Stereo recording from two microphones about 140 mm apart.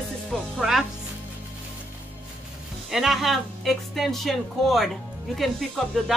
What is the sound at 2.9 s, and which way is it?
Speech, centre (ahead or behind).